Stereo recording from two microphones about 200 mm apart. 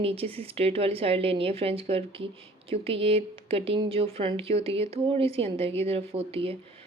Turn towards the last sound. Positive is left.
turn(degrees=-30)  # may be behind; listen again after turning